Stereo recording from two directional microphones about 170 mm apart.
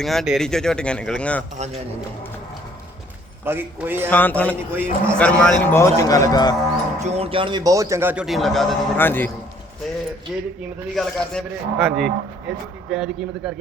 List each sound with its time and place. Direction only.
0.0 s speech: centre (ahead or behind)
1.5 s a man's voice: 40° right (ahead or behind)
3.4 s a man's voice: 10° right (ahead or behind)
4.1 s a man's voice: 10° left (ahead or behind)
4.7 s a man's voice: 15° right (ahead or behind)
5.1 s a man's voice: 5° left (ahead or behind); by 6.6 s 25° left (ahead or behind)
7.0 s a man's voice: 40° right (ahead or behind); by 8.8 s centre (ahead or behind)
9.0 s a man's voice: 10° left (ahead or behind)
10.3 s speech: centre (ahead or behind)